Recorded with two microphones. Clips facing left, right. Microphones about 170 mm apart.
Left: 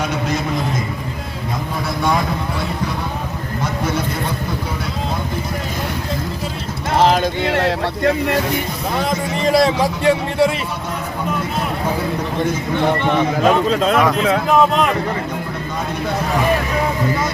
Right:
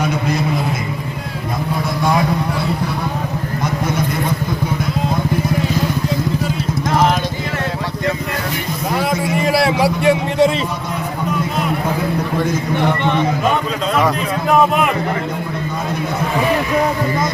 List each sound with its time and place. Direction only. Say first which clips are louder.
6.9 s clip-clop: left 2 dB; 30° left (ahead or behind)
9.0 s a man's voice: right 2 dB; 10° right (ahead or behind)
14.5 s a man's voice: right 2 dB; 5° right (ahead or behind)